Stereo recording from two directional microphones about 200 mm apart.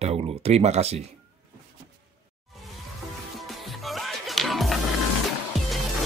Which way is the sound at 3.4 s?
Centre (ahead or behind).